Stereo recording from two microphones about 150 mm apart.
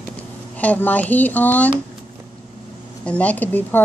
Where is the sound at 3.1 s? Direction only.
10° left (ahead or behind).